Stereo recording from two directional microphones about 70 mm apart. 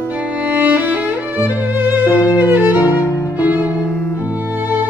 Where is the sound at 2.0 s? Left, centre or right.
Left.